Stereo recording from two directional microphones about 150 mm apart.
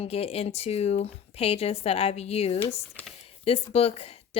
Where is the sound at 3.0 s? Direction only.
10° left (ahead or behind).